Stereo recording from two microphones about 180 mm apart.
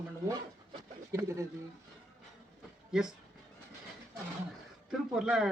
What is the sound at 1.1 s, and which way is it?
Speech, 15° right (ahead or behind).